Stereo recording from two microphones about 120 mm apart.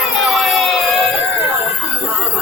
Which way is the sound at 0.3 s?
Centre (ahead or behind).